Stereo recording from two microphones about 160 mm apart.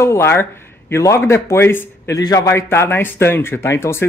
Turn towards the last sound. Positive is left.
turn(degrees=15)  # may be behind; listen again after turning